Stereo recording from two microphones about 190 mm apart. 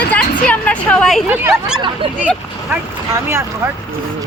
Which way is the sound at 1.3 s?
10° right (ahead or behind).